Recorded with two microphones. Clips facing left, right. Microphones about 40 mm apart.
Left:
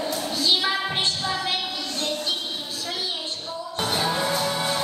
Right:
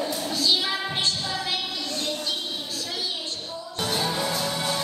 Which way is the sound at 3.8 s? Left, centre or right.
Left.